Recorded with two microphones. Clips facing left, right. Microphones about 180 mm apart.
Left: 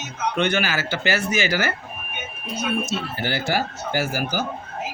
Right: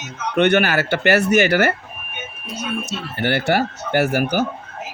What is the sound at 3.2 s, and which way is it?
Speech, 60° right (ahead or behind).